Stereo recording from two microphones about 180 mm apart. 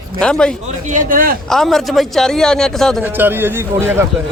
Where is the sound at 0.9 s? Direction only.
50° right (ahead or behind).